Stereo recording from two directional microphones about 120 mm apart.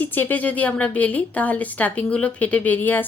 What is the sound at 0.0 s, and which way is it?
Speech, 15° left (ahead or behind).